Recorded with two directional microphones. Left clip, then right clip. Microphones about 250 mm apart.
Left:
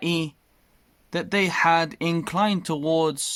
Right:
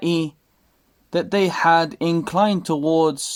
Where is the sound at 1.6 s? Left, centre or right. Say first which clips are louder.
Right 4 dB; left.